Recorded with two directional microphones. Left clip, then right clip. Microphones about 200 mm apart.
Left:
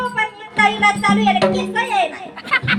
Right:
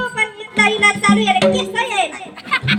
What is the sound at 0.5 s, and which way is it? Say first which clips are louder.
Speech: right 1 dB; 60° right (ahead or behind).